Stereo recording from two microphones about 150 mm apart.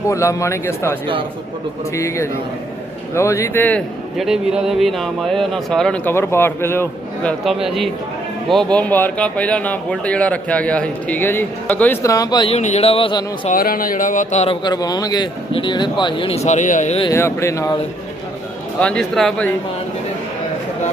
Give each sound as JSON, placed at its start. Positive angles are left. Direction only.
{"t": 0.1, "sound": "a man's voice", "side_deg": 20}
{"t": 2.0, "sound": "a man's voice", "side_deg": 20}
{"t": 4.2, "sound": "speech", "side_deg": 0}
{"t": 7.3, "sound": "speech", "side_deg": 0}
{"t": 12.0, "sound": "a man's voice", "side_deg": 25}
{"t": 12.5, "sound": "speech", "side_deg": 45}
{"t": 13.5, "sound": "speech", "side_deg": 70}
{"t": 17.1, "sound": "a man's voice", "side_deg": 20}
{"t": 18.8, "sound": "speech", "side_deg": 5}